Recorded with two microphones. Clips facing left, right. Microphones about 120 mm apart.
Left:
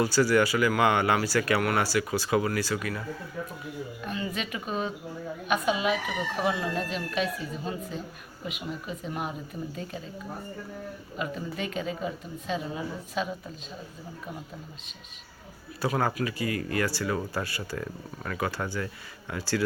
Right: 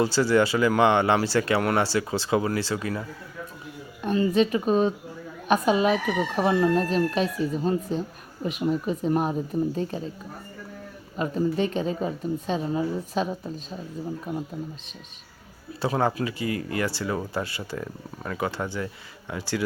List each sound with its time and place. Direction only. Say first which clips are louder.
0.0 s speech: right 2 dB; 25° right (ahead or behind)
4.0 s speech: right 13 dB; 35° right (ahead or behind)
11.2 s speech: right 9 dB; 35° right (ahead or behind)
15.8 s speech: right 3 dB; 25° right (ahead or behind)